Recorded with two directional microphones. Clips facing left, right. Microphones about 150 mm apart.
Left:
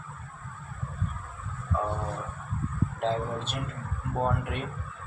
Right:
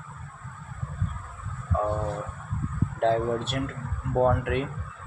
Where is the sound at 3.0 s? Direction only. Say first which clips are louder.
Right 7 dB; 65° right (ahead or behind).